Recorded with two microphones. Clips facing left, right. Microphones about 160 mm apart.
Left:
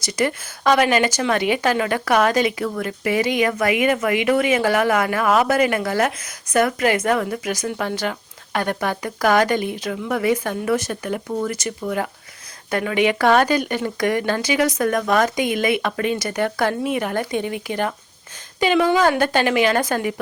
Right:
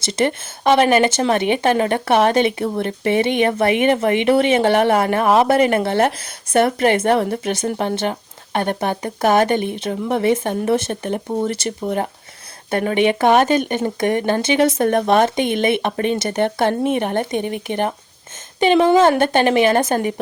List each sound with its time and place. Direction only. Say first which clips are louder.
0.0 s speech: right 3 dB; 25° right (ahead or behind)